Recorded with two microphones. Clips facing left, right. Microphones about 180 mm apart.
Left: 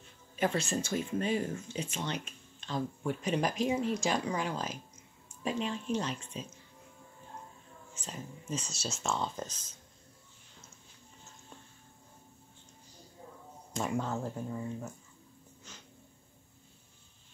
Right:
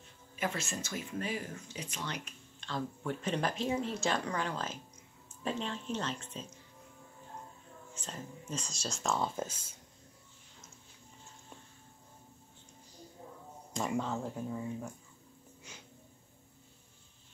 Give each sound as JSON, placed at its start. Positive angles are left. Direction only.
{"t": 0.4, "sound": "speech", "side_deg": 30}
{"t": 7.9, "sound": "speech", "side_deg": 10}
{"t": 13.7, "sound": "speech", "side_deg": 0}
{"t": 15.7, "sound": "a sound", "side_deg": -10}